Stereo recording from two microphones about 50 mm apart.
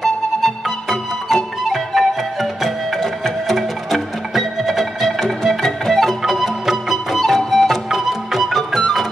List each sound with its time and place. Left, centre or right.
0.0 s music: centre